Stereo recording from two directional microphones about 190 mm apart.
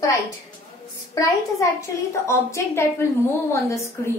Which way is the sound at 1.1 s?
15° left (ahead or behind).